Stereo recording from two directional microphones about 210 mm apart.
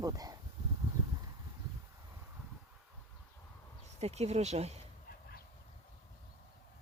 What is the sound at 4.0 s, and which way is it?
Speech, 30° right (ahead or behind).